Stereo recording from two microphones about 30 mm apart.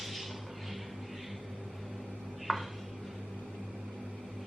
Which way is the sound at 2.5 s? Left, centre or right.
Centre.